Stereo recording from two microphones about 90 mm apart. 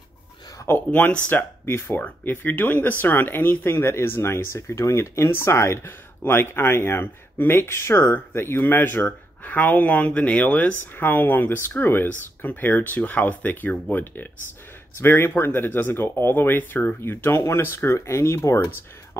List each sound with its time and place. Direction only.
0.7 s speech: 20° left (ahead or behind)